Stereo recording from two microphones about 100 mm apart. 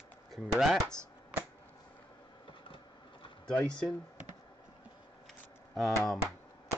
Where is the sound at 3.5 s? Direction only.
10° left (ahead or behind).